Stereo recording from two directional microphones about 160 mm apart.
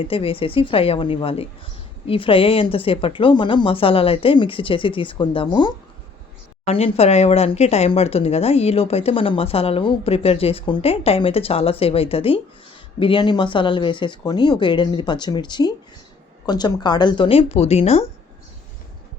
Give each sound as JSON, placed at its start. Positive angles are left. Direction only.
{"t": 0.1, "sound": "speech", "side_deg": 35}